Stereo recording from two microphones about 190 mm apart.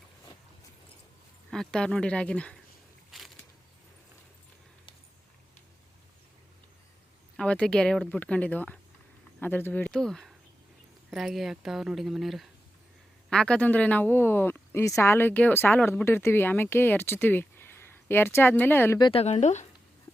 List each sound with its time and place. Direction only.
1.5 s a woman's voice: 5° left (ahead or behind)
3.1 s a sound: centre (ahead or behind)
7.3 s a woman's voice: 5° left (ahead or behind)
18.9 s speech: 25° left (ahead or behind)